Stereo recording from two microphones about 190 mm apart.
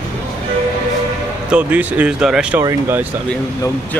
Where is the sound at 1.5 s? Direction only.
10° right (ahead or behind).